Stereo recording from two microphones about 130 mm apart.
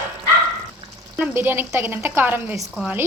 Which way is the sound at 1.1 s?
15° right (ahead or behind).